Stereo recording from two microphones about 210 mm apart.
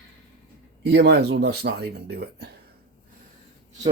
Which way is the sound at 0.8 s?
55° right (ahead or behind).